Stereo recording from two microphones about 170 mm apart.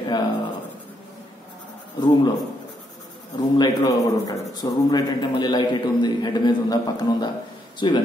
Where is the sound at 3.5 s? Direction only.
25° left (ahead or behind).